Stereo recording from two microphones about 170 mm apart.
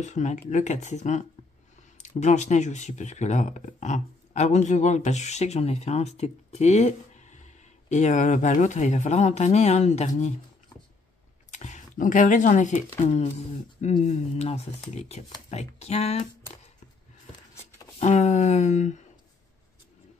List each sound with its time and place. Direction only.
0.0 s speech: 45° left (ahead or behind)
11.5 s speech: 45° left (ahead or behind)
17.9 s speech: 40° left (ahead or behind)